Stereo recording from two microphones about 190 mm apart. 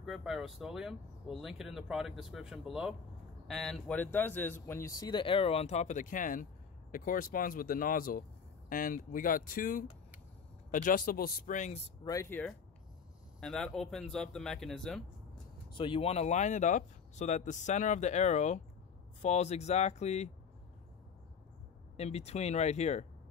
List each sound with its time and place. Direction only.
0.0 s speech: centre (ahead or behind); by 11.9 s 35° left (ahead or behind)
12.0 s speech: 15° left (ahead or behind)
15.7 s speech: 25° left (ahead or behind)
21.9 s speech: 35° left (ahead or behind)